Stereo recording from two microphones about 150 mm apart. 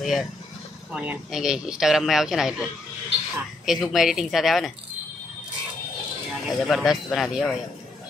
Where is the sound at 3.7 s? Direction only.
Centre (ahead or behind).